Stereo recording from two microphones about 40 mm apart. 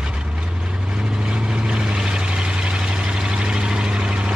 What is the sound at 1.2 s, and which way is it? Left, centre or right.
Vehicle, right.